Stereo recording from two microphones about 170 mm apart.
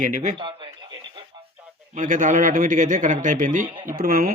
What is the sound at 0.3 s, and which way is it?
Speech, 30° right (ahead or behind).